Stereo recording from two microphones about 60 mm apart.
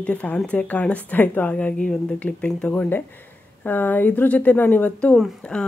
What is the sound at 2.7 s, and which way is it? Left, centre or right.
A woman's voice, left.